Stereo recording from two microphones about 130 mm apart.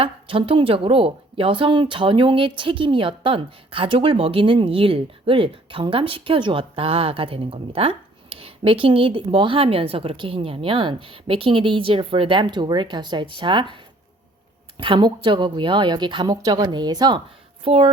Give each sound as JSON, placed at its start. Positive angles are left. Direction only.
{"t": 0.0, "sound": "a woman's voice", "side_deg": -45}
{"t": 17.6, "sound": "a woman's voice", "side_deg": -45}